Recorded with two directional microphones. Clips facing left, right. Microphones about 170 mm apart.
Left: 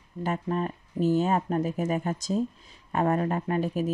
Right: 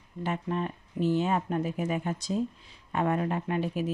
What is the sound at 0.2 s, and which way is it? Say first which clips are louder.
Speech: left 2 dB; 40° left (ahead or behind).